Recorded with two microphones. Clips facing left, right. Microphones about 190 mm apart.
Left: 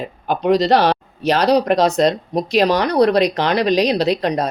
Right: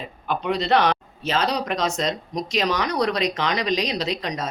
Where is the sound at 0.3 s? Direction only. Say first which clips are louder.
Left 7 dB; 40° left (ahead or behind).